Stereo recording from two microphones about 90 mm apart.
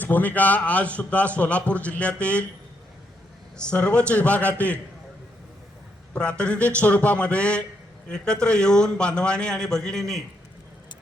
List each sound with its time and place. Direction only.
0.0 s a man's voice: 20° left (ahead or behind)
3.6 s a man's voice: 10° left (ahead or behind)
6.1 s a man's voice: 10° left (ahead or behind)